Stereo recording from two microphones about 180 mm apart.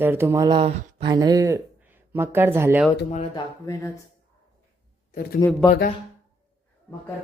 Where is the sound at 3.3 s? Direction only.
20° left (ahead or behind).